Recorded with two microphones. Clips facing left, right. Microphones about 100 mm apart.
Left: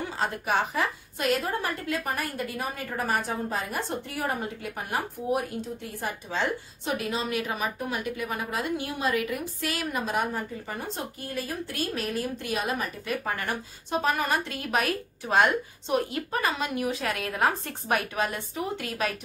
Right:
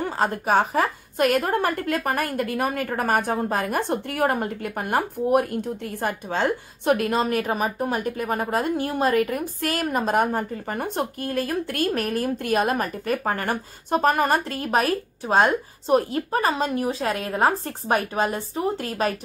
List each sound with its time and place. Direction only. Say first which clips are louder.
0.0 s a woman's voice: right 6 dB; 45° right (ahead or behind)